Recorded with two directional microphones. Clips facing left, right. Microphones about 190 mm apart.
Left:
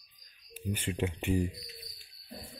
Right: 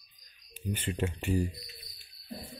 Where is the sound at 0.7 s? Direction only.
10° left (ahead or behind).